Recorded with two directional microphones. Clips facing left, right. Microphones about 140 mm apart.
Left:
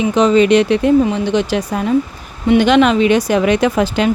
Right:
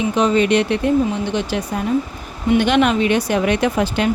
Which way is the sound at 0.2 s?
90° left.